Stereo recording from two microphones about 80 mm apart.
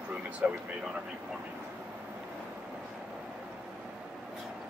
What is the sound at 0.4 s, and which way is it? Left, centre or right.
Speech, centre.